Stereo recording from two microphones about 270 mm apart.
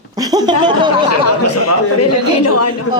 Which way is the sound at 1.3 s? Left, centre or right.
Left.